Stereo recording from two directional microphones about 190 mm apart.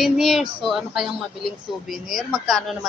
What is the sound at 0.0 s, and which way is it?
Speech, centre (ahead or behind).